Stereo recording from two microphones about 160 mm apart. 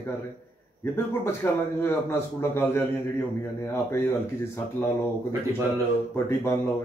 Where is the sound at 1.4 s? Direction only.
15° left (ahead or behind).